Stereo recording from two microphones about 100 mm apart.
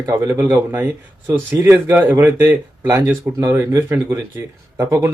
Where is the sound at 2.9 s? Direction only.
30° right (ahead or behind).